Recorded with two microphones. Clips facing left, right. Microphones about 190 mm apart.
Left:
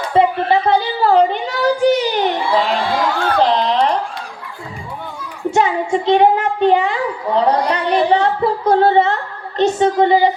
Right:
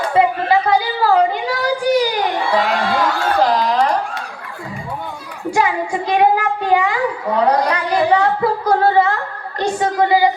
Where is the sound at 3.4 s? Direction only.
25° left (ahead or behind).